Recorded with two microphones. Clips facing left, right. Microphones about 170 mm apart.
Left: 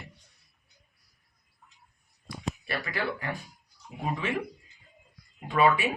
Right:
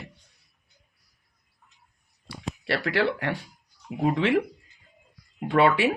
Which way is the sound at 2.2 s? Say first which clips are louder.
Right 4 dB; 80° right.